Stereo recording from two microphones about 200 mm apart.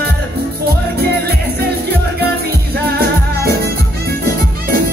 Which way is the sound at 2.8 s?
50° right (ahead or behind).